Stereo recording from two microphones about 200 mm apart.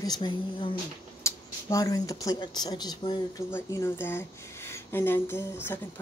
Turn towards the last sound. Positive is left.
turn(degrees=10)  # may be behind; listen again after turning